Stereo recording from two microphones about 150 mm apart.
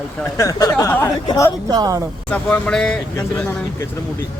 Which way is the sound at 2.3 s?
5° left (ahead or behind).